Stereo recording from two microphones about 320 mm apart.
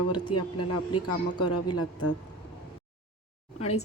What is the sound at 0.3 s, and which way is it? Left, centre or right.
Speech, left.